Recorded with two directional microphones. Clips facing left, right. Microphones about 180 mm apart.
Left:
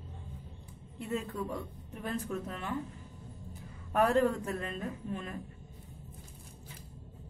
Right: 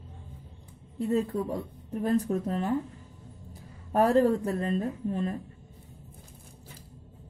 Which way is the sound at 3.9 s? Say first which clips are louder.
Right 5 dB; 35° right (ahead or behind).